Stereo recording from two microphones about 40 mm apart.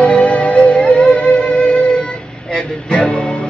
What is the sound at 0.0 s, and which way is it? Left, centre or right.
Music, left.